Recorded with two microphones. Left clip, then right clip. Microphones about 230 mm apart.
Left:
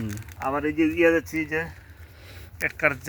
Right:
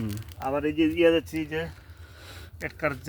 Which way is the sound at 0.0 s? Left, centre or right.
Centre.